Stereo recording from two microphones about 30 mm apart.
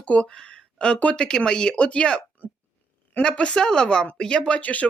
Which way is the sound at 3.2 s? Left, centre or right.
Left.